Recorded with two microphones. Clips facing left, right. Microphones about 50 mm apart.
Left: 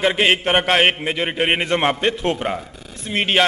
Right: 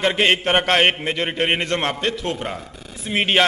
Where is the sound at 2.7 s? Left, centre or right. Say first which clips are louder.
Right 1 dB; centre.